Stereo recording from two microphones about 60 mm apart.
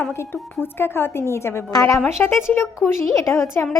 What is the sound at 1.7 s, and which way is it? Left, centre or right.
Speech, left.